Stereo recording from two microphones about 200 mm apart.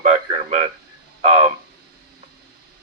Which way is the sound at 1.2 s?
30° right (ahead or behind).